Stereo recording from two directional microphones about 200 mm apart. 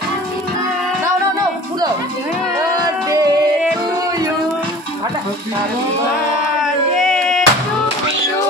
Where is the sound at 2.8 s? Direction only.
20° right (ahead or behind).